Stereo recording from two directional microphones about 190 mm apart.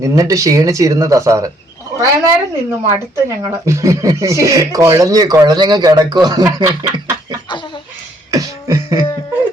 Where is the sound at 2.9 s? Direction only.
15° right (ahead or behind).